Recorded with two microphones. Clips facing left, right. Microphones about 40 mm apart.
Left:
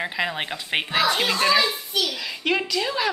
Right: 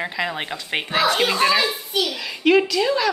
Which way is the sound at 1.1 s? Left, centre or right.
Centre.